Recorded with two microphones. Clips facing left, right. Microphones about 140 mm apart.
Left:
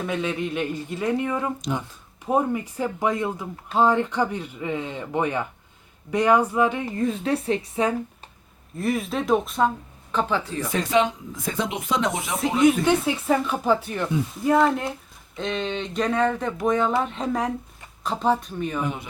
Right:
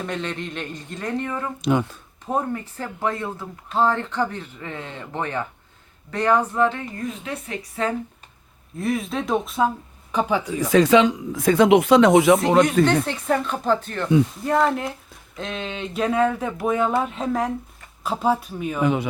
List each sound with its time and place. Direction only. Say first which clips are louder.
0.0 s speech: left 2 dB; 5° left (ahead or behind)
6.8 s speech: left 6 dB; 35° left (ahead or behind)
8.7 s speech: even; centre (ahead or behind)
10.1 s speech: right 2 dB; 15° right (ahead or behind)
10.7 s speech: right 7 dB; 90° right
12.8 s speech: right 2 dB; 10° left (ahead or behind)
18.8 s speech: right 12 dB; 90° right